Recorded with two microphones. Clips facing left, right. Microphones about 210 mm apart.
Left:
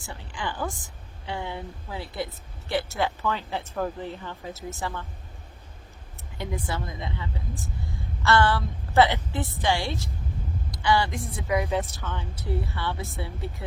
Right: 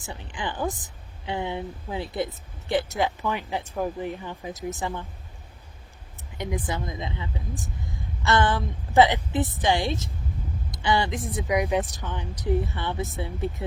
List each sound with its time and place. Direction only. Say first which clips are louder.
0.0 s a woman's voice: right 1 dB; 20° right (ahead or behind)
6.3 s a woman's voice: right 2 dB; 20° right (ahead or behind)